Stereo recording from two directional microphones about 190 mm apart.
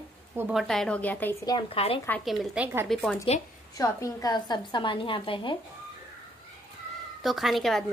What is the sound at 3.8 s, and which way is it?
A woman's voice, 20° left (ahead or behind).